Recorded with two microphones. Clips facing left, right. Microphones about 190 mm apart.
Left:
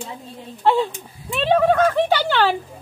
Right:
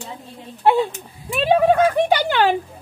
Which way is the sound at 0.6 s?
10° right (ahead or behind).